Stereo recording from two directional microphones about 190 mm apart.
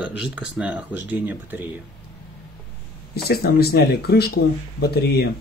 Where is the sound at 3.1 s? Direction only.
55° left (ahead or behind).